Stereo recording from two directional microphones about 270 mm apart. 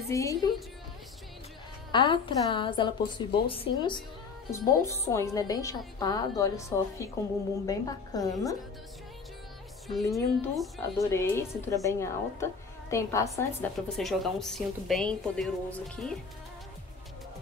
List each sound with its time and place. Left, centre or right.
0.1 s a woman's voice: centre
1.9 s a woman's voice: centre
10.0 s a woman's voice: centre